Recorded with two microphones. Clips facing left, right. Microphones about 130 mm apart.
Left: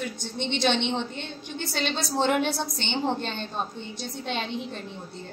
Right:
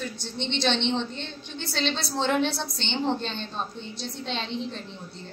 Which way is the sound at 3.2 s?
50° left (ahead or behind).